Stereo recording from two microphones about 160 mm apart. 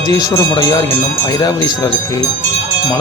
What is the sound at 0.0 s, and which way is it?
A man's voice, 20° left (ahead or behind).